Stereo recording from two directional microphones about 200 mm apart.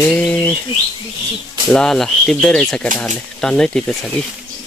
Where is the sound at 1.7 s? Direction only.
Centre (ahead or behind).